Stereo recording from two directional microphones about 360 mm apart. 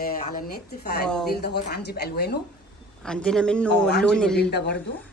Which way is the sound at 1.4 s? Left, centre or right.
Left.